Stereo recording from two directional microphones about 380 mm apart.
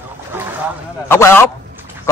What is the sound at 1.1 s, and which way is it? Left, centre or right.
Speech, centre.